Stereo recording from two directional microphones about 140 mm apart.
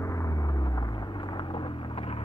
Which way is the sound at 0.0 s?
20° left (ahead or behind).